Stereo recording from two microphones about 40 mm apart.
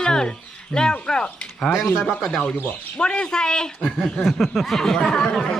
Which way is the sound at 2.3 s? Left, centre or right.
Left.